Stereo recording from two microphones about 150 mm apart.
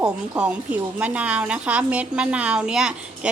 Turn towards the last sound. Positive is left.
turn(degrees=-5)  # may be behind; listen again after turning